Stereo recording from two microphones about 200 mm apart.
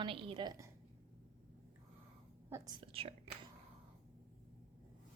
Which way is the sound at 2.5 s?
15° right (ahead or behind).